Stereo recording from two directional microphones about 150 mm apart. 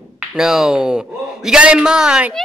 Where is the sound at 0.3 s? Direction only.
5° right (ahead or behind).